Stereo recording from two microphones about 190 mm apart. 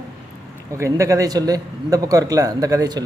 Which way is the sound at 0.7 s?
15° right (ahead or behind).